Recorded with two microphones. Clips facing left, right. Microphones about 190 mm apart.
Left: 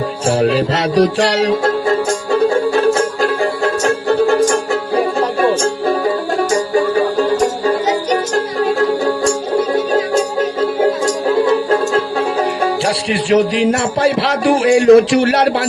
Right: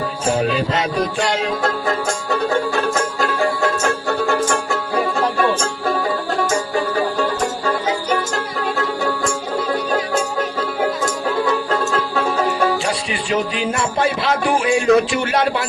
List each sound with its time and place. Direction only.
0.3 s music: 80° left
2.7 s music: 35° left (ahead or behind)
10.6 s music: 30° left (ahead or behind)
12.8 s a man's voice: 80° left